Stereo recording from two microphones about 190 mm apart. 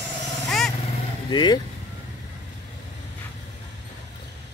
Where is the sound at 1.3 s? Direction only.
25° left (ahead or behind).